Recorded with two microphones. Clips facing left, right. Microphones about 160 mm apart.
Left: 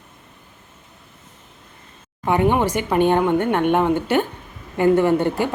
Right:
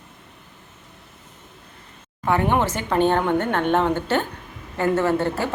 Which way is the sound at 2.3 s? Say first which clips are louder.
Left 2 dB; 15° left (ahead or behind).